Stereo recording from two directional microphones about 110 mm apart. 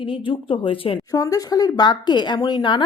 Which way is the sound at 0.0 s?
50° left (ahead or behind).